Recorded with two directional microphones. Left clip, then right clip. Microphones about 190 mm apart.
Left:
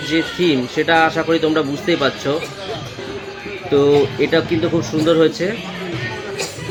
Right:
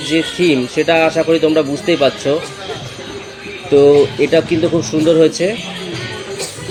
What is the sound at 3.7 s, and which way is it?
A man's voice, 15° right (ahead or behind).